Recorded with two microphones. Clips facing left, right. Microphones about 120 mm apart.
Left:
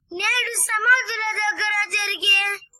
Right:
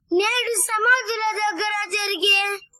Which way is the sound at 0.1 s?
20° right (ahead or behind).